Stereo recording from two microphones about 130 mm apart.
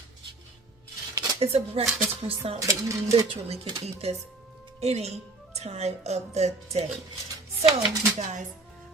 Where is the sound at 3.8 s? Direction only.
55° right (ahead or behind).